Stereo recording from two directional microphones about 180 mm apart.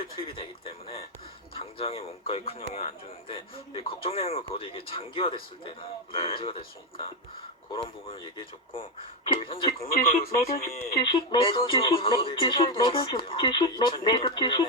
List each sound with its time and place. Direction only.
0.0 s a man's voice: 30° left (ahead or behind)
9.2 s a man's voice: 30° left (ahead or behind)
9.9 s speech: 55° left (ahead or behind)
11.1 s speech: 30° left (ahead or behind)